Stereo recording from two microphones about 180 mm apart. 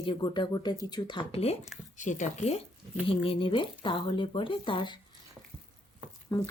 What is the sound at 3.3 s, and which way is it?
Speech, 30° left (ahead or behind).